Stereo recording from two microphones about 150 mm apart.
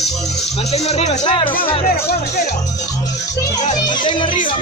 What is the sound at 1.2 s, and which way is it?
Speech, 30° left (ahead or behind).